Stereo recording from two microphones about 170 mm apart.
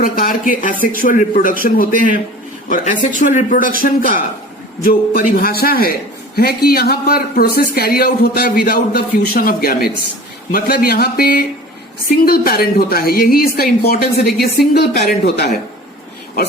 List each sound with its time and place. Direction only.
0.0 s a man's voice: 55° left (ahead or behind)